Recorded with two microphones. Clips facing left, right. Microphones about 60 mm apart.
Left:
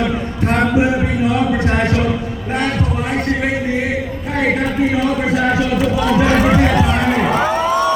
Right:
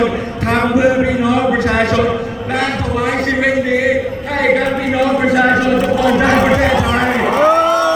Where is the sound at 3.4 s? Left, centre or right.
Right.